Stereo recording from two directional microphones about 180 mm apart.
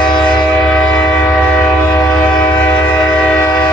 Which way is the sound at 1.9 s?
25° left (ahead or behind).